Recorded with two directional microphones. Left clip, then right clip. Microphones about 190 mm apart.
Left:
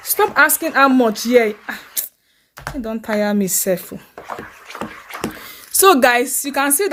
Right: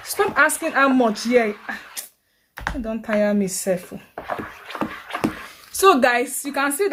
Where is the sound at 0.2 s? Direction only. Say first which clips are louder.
Left 4 dB; 45° left (ahead or behind).